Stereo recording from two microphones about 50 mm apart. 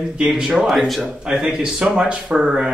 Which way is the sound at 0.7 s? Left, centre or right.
Centre.